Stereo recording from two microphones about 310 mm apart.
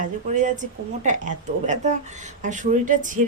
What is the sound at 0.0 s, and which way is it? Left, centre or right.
Speech, right.